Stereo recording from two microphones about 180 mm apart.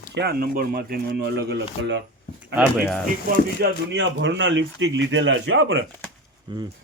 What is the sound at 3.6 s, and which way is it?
Speech, 85° right.